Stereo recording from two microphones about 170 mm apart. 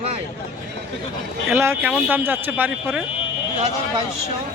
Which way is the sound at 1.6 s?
10° right (ahead or behind).